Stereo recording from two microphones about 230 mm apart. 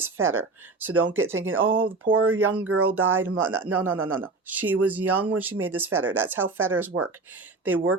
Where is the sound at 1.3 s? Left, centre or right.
Right.